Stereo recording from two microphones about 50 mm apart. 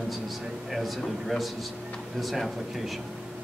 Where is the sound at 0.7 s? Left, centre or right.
Centre.